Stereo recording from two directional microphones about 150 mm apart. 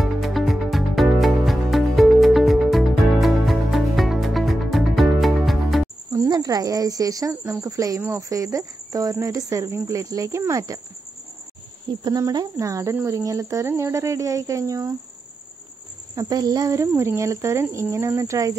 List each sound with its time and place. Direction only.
0.0 s music: centre (ahead or behind)
6.1 s speech: 20° right (ahead or behind)
12.0 s speech: 25° right (ahead or behind)
16.2 s speech: 25° right (ahead or behind)